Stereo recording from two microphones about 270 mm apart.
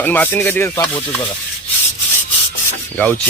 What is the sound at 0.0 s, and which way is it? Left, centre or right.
Speech, centre.